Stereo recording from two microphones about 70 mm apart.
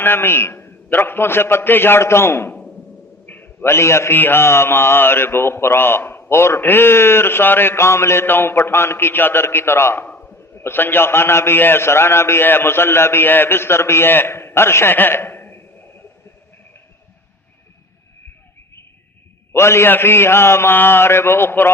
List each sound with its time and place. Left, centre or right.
0.0 s a man's voice: left
2.5 s a sound: centre
3.2 s a man's voice: left
10.1 s a sound: left
10.6 s a man's voice: left
19.5 s a man's voice: left